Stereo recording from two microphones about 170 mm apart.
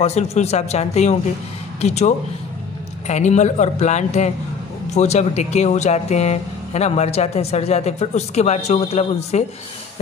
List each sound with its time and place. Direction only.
0.0 s a man's voice: 40° left (ahead or behind)